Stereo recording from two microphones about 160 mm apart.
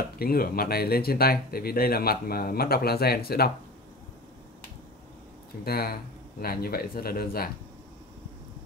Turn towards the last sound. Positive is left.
turn(degrees=70)  # may be behind; listen again after turning